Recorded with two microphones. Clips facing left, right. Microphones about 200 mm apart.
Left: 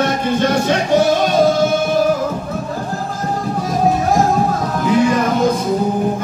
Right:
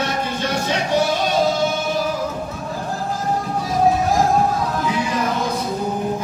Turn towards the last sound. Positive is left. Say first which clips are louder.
# left 8 dB
turn(degrees=50)  # may be behind; listen again after turning